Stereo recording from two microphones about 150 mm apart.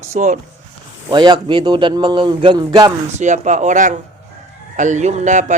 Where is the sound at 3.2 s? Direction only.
55° right (ahead or behind).